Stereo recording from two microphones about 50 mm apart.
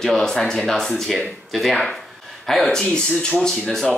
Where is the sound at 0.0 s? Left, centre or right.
Centre.